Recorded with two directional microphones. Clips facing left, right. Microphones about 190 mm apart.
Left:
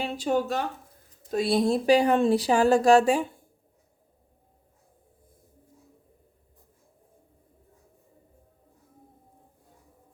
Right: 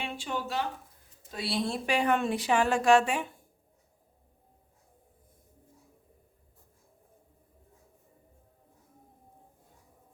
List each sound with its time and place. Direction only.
0.0 s speech: 40° left (ahead or behind)